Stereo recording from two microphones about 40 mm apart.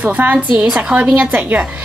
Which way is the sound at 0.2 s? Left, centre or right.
Right.